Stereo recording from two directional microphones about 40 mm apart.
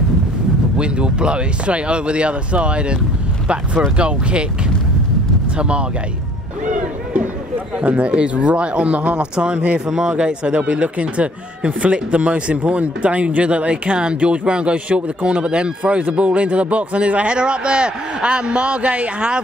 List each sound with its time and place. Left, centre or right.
0.7 s speech: right
5.6 s speech: right
7.8 s speech: right